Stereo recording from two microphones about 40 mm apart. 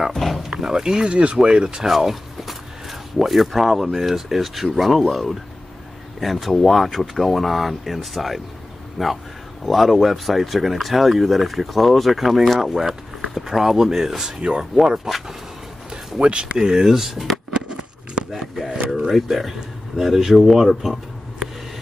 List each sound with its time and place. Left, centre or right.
0.1 s a sound: centre
0.4 s speech: centre
1.9 s speech: centre
14.4 s speech: right
15.1 s speech: centre
16.2 s speech: right
16.5 s speech: centre
17.5 s a sound: right
18.3 s a sound: centre
18.9 s speech: centre